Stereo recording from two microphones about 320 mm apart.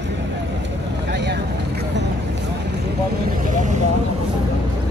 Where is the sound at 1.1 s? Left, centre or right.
Right.